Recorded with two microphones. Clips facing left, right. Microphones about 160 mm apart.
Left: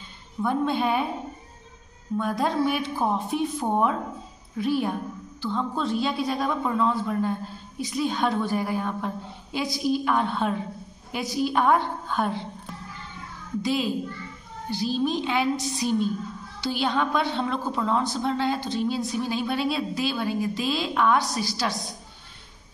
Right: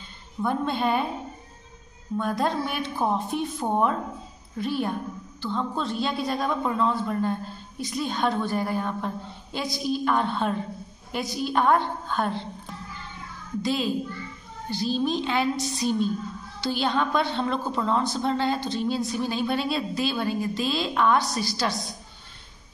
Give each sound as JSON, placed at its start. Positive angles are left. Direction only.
{"t": 0.4, "sound": "a woman's voice", "side_deg": 5}
{"t": 2.1, "sound": "a woman's voice", "side_deg": 5}
{"t": 13.6, "sound": "a woman's voice", "side_deg": 10}